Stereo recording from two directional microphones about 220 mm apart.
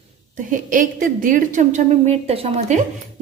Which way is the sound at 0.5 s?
35° right (ahead or behind).